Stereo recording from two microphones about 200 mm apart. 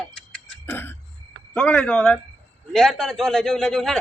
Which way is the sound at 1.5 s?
5° left (ahead or behind).